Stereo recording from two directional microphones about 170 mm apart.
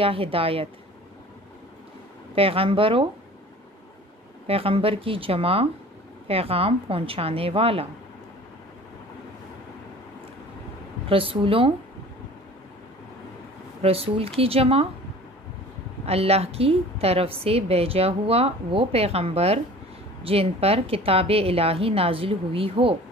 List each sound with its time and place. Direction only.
0.0 s a woman's voice: 35° right (ahead or behind)
2.3 s a woman's voice: 35° right (ahead or behind)
4.5 s a woman's voice: 35° right (ahead or behind)
11.1 s a woman's voice: 30° right (ahead or behind)
13.8 s a woman's voice: 35° right (ahead or behind)
16.1 s a woman's voice: 35° right (ahead or behind)